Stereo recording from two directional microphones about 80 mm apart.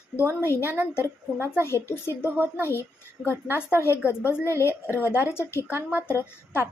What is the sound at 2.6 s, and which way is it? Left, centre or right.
A woman's voice, left.